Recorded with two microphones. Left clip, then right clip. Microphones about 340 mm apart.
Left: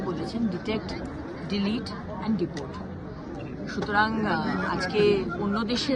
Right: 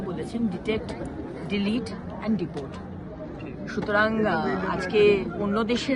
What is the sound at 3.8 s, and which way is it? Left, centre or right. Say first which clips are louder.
Speech: right 2 dB; centre.